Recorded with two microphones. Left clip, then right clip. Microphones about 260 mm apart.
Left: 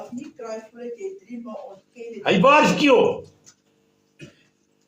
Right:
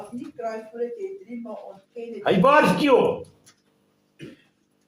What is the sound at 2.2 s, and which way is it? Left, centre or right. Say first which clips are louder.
Speech: left 2 dB; left.